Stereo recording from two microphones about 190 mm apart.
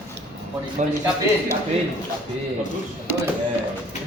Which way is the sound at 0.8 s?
40° right (ahead or behind).